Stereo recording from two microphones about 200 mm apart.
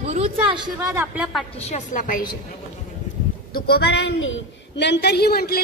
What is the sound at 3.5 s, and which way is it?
A woman's voice, 50° left (ahead or behind).